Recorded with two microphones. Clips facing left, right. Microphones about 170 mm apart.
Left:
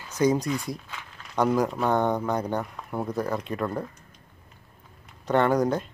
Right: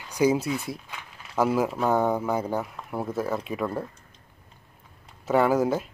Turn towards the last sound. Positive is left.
turn(degrees=-5)  # may be behind; listen again after turning